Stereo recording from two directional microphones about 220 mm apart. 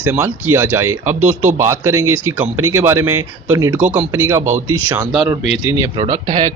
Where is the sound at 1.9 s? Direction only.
70° right (ahead or behind).